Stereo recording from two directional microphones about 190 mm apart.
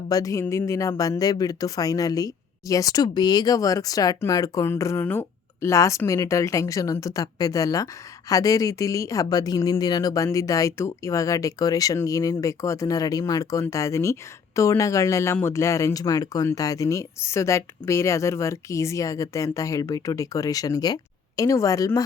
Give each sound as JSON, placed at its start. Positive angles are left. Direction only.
{"t": 0.1, "sound": "speech", "side_deg": 20}